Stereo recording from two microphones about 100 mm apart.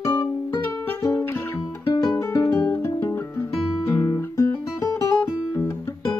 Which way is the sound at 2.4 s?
20° left (ahead or behind).